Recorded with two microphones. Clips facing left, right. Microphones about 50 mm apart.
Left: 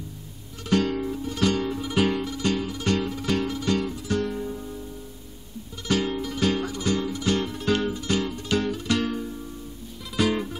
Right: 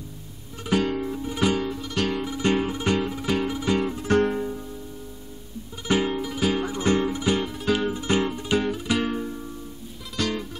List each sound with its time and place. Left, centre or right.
0.7 s music: centre
1.6 s music: centre
2.2 s music: right
2.8 s music: centre
3.9 s music: right
5.9 s music: centre
6.7 s music: right
7.4 s music: centre
7.9 s music: right
10.1 s music: centre